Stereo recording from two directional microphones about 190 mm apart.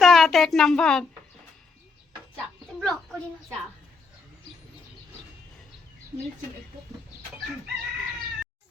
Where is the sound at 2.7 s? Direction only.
Centre (ahead or behind).